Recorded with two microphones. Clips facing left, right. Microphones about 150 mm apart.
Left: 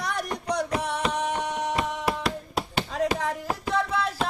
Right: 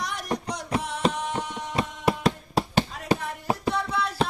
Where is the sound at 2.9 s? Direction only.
90° left.